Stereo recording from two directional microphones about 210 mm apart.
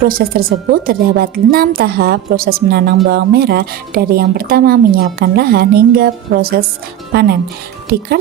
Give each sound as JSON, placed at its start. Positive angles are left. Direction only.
{"t": 0.0, "sound": "a woman's voice", "side_deg": -45}